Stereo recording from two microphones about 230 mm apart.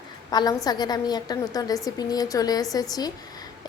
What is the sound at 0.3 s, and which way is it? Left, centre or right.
A woman's voice, centre.